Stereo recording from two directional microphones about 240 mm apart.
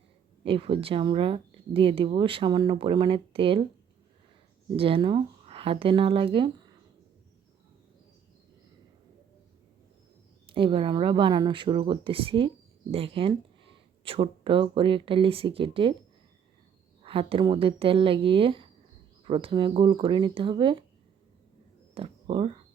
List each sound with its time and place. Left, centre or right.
0.4 s speech: right
4.8 s speech: right
10.4 s speech: right
17.0 s speech: right
21.9 s speech: right